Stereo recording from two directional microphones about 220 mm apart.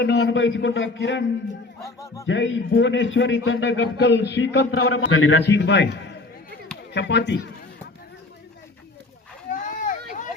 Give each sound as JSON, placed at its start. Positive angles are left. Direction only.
{"t": 0.0, "sound": "a man's voice", "side_deg": 50}
{"t": 1.8, "sound": "speech", "side_deg": 15}
{"t": 2.2, "sound": "a man's voice", "side_deg": 55}
{"t": 4.9, "sound": "a man's voice", "side_deg": 65}
{"t": 9.5, "sound": "a sound", "side_deg": 35}